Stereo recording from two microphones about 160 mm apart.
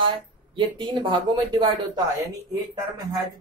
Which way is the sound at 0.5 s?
30° right (ahead or behind).